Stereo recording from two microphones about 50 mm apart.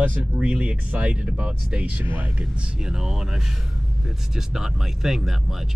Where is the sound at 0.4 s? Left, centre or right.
Right.